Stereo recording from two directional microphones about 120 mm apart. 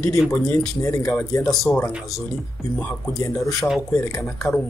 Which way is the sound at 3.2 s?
25° left (ahead or behind).